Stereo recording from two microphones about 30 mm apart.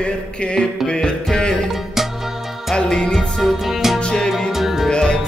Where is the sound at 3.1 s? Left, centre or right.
Centre.